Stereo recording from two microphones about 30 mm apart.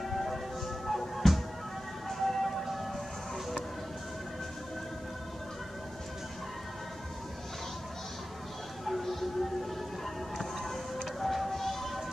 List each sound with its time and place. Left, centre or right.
0.0 s music: centre
2.6 s siren: centre
8.8 s music: centre